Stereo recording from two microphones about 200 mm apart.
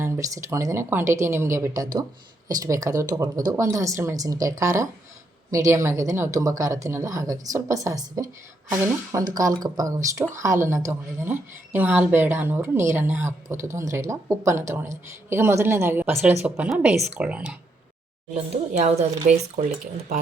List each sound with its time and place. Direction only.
0.0 s a woman's voice: 15° right (ahead or behind)
18.5 s a woman's voice: 30° right (ahead or behind)